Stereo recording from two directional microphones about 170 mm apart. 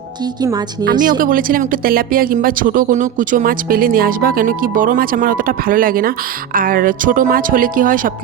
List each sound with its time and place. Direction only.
0.9 s speech: 50° right (ahead or behind)